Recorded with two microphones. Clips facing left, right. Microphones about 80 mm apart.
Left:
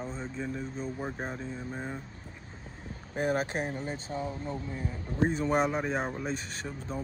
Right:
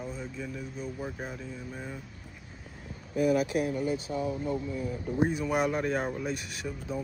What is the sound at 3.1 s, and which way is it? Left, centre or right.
Speech, left.